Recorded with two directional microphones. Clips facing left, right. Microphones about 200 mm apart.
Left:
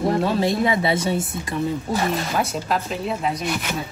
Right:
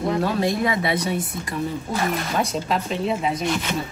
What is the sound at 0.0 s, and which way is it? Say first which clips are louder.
Speech: left 2 dB; 25° left (ahead or behind).